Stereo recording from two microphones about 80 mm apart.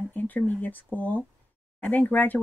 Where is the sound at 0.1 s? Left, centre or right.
Left.